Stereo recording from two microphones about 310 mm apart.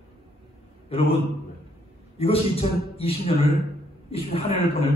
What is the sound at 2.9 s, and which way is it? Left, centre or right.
A man's voice, centre.